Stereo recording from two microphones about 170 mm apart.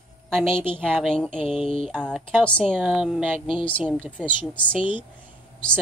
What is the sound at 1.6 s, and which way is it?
Mantra, 35° left (ahead or behind).